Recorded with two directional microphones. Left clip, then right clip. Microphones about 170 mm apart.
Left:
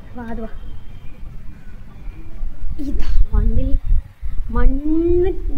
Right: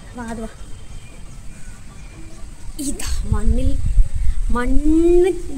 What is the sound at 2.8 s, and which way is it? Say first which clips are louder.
Speech: right 3 dB; 15° right (ahead or behind).